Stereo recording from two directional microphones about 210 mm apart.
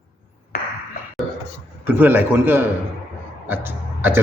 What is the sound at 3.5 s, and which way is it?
Throat clearing, 10° right (ahead or behind).